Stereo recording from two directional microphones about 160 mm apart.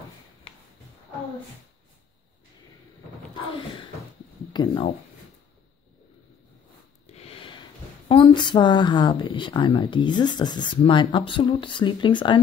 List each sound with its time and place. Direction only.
4.5 s speech: 30° left (ahead or behind)
7.1 s a sound: 40° left (ahead or behind)
8.1 s a woman's voice: 30° left (ahead or behind)